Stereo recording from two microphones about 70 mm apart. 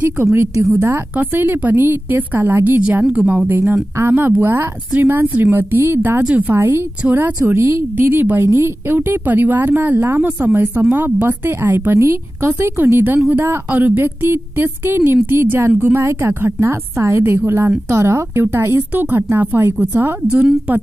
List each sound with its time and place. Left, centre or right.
0.2 s speech: right
1.1 s speech: right